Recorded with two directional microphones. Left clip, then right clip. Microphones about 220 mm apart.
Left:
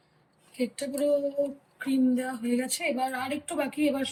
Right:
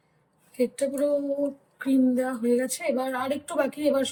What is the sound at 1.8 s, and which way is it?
Speech, 30° right (ahead or behind).